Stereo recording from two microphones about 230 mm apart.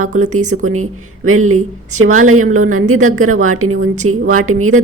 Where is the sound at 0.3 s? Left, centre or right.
Right.